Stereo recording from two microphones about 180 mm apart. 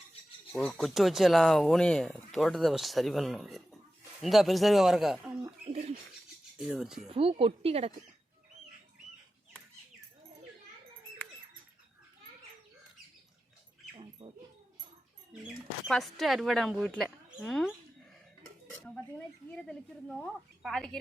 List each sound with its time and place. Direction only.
0.5 s speech: 5° left (ahead or behind)
5.6 s a sound: 35° right (ahead or behind)
6.6 s speech: 5° right (ahead or behind)
7.2 s speech: 30° right (ahead or behind)
13.9 s dog: 30° right (ahead or behind)
15.3 s speech: centre (ahead or behind)
18.7 s dishes: 5° left (ahead or behind)
19.5 s speech: 5° left (ahead or behind)